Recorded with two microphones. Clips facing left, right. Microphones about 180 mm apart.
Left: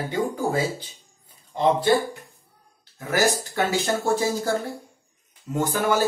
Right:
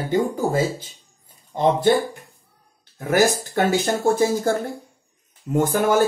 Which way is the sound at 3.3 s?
55° right (ahead or behind).